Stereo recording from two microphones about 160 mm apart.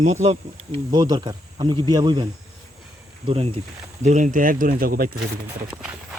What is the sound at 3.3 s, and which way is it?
Speech, 35° right (ahead or behind).